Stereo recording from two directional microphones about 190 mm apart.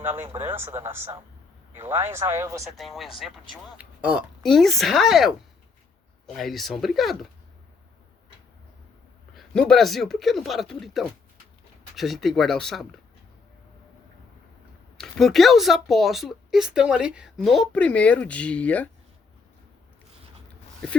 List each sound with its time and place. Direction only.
0.5 s speech: 10° right (ahead or behind)
2.6 s speech: centre (ahead or behind)
9.3 s speech: centre (ahead or behind)
14.9 s speech: centre (ahead or behind)